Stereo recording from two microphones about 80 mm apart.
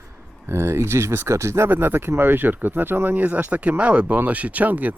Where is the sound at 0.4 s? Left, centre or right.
Right.